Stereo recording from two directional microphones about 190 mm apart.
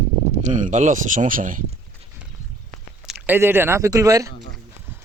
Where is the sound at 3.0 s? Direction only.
10° right (ahead or behind).